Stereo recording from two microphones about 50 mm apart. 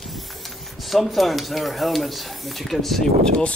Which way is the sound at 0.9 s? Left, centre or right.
Centre.